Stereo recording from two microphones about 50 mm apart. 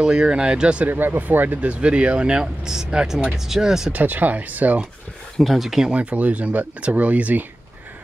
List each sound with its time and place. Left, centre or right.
0.0 s speech: centre
0.8 s speech: right; by 3.9 s centre
3.9 s speech: right
5.4 s speech: centre
5.9 s speech: right